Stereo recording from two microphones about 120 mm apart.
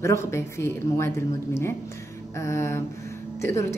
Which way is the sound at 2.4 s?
25° left (ahead or behind).